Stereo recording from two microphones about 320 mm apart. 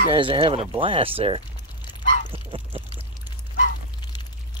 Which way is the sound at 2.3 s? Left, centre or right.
Centre.